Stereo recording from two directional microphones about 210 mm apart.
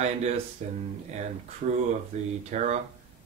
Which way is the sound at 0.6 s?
35° right (ahead or behind).